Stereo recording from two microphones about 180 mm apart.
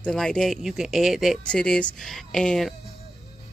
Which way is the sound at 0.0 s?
5° left (ahead or behind).